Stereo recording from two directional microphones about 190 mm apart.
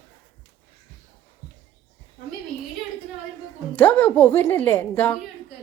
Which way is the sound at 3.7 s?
10° left (ahead or behind).